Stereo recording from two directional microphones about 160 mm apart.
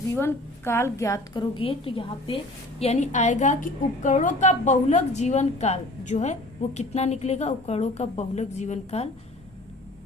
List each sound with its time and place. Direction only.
0.2 s a woman's voice: 15° left (ahead or behind); by 9.0 s 45° left (ahead or behind)